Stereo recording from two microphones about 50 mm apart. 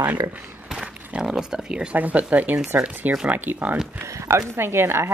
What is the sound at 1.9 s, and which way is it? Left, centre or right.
Speech, right.